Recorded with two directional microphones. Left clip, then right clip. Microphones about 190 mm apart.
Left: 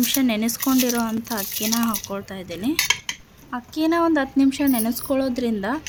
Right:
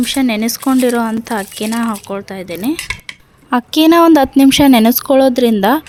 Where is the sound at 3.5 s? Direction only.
50° right (ahead or behind).